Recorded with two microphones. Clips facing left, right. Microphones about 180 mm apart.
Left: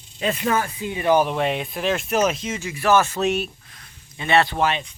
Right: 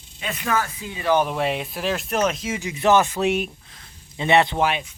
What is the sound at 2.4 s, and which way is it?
Speech, 15° right (ahead or behind).